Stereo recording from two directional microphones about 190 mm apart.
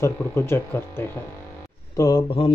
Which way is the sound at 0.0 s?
15° left (ahead or behind).